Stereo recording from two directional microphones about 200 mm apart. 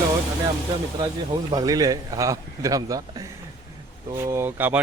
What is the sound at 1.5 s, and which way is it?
Speech, 20° right (ahead or behind).